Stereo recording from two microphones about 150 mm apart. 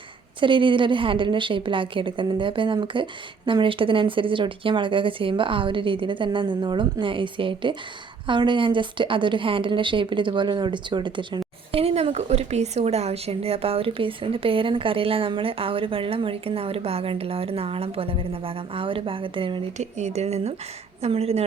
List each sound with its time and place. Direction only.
0.3 s a woman's voice: 35° right (ahead or behind)
19.8 s speech: 50° right (ahead or behind)